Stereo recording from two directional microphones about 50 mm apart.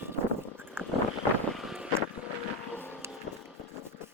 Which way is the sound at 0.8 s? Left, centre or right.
Right.